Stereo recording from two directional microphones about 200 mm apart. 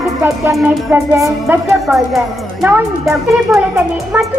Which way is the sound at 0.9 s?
15° right (ahead or behind).